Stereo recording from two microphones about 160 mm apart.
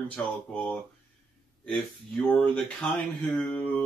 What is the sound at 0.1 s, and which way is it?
Mantra, 5° left (ahead or behind).